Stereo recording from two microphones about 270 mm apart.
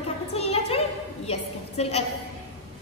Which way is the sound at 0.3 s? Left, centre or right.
Left.